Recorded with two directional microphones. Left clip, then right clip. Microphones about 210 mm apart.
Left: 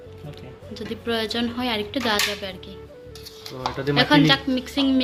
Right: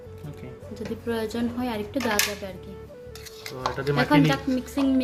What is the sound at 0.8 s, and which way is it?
A woman's voice, 10° right (ahead or behind).